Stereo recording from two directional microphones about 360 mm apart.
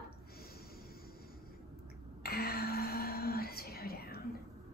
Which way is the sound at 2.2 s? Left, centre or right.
Left.